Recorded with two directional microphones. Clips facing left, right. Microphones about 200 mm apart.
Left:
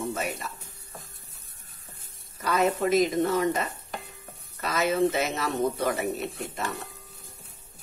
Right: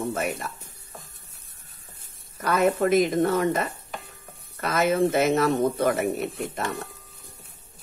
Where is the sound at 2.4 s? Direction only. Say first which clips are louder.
Right 3 dB; 55° right (ahead or behind).